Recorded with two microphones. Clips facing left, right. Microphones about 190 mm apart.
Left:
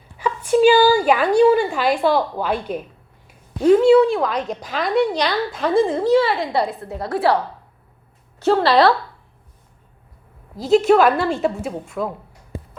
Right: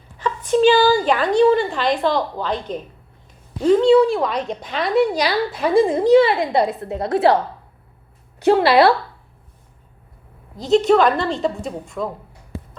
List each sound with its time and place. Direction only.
0.2 s a woman's voice: 10° left (ahead or behind); by 7.3 s 20° right (ahead or behind)
8.4 s speech: 15° right (ahead or behind)
10.6 s a woman's voice: 5° left (ahead or behind)